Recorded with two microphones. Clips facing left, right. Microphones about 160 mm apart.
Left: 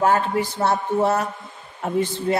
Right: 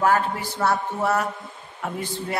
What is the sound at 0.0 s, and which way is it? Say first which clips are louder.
Speech: left 2 dB; 25° left (ahead or behind).